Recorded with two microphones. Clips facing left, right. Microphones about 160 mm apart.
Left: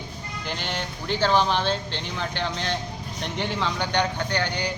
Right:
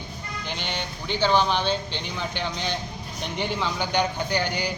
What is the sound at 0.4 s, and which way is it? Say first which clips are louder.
A man's voice: left 2 dB; centre (ahead or behind).